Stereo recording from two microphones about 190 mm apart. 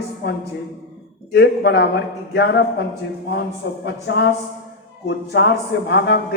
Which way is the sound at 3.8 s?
65° left (ahead or behind).